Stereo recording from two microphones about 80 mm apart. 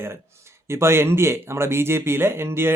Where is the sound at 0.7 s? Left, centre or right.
Right.